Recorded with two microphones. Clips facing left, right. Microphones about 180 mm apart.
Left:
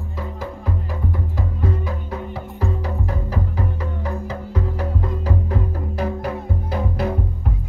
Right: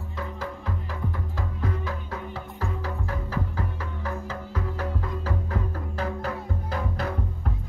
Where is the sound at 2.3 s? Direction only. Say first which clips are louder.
Left 6 dB; 15° left (ahead or behind).